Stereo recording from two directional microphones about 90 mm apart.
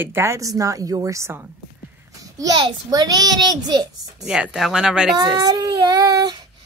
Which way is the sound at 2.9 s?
45° right (ahead or behind).